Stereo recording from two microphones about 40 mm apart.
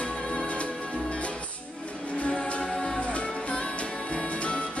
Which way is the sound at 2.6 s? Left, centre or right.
Centre.